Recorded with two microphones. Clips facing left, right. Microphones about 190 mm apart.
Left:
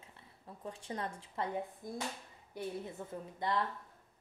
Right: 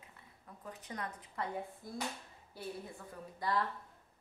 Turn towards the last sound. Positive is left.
turn(degrees=25)  # may be behind; listen again after turning